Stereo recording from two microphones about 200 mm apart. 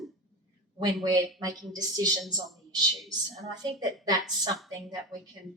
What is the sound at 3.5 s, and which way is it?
A woman's voice, 20° right (ahead or behind).